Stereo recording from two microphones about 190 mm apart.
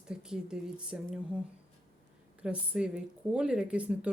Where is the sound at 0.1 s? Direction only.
5° right (ahead or behind).